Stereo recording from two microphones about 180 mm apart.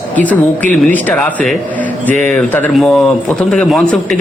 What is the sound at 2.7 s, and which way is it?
A man's voice, centre (ahead or behind).